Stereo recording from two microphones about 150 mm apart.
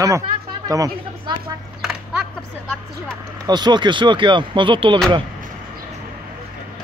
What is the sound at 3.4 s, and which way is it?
Speech, 30° right (ahead or behind).